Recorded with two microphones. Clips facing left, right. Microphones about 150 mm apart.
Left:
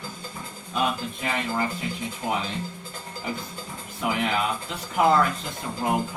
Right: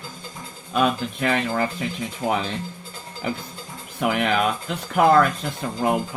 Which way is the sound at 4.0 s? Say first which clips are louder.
Right 4 dB; 70° right (ahead or behind).